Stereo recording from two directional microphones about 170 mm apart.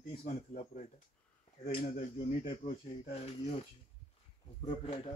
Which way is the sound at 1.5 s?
35° left (ahead or behind).